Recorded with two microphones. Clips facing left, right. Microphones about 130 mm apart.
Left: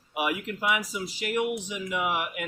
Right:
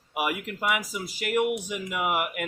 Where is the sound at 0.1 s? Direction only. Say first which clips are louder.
Even; 50° right (ahead or behind).